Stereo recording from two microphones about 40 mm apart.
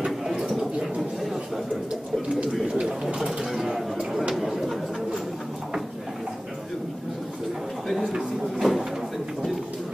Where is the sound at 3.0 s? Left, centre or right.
Centre.